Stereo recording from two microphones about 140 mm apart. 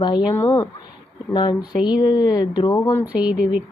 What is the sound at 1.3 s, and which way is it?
A woman's voice, 35° left (ahead or behind).